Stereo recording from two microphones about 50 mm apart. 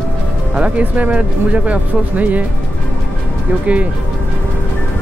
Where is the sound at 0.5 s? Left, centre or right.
Right.